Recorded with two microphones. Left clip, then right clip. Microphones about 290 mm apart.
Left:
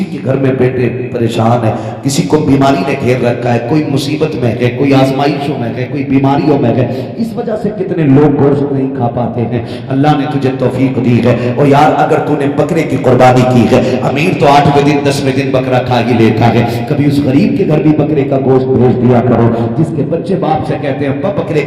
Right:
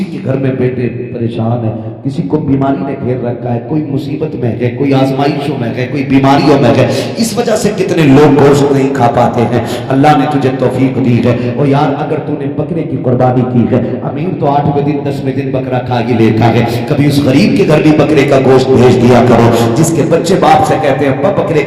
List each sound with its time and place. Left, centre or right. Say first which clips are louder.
0.3 s a man's voice: left 2 dB; centre
2.6 s a sound: left 4 dB; left
3.2 s a man's voice: left 5 dB; left
4.6 s a man's voice: left 1 dB; centre
6.1 s a man's voice: right 3 dB; centre
7.5 s a man's voice: right 3 dB; right
9.9 s a man's voice: right 3 dB; centre; by 12.6 s left
13.1 s a sound: left 5 dB; left
14.4 s a man's voice: left 4 dB; left
15.5 s a man's voice: left 3 dB; centre
17.8 s speech: right 3 dB; right
20.4 s a man's voice: right 6 dB; right